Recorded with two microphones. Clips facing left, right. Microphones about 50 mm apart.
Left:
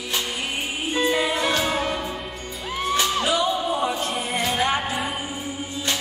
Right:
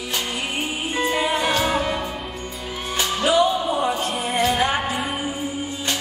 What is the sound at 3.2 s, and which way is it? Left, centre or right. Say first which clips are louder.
Music: right 4 dB; right.